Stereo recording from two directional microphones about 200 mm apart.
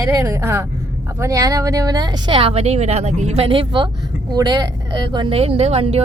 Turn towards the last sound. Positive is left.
turn(degrees=-30)  # may be behind; listen again after turning